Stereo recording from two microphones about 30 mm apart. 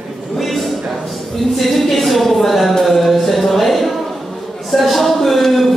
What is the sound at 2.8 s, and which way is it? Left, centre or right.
Music, centre.